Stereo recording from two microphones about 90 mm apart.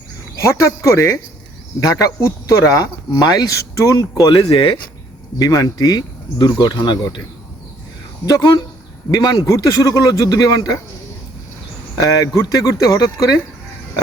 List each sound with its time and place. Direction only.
0.4 s speech: 35° left (ahead or behind)
4.4 s speech: 90° left
5.4 s speech: 45° left (ahead or behind); by 7.2 s 60° left (ahead or behind)
8.3 s speech: 50° left (ahead or behind)
11.9 s speech: 40° left (ahead or behind)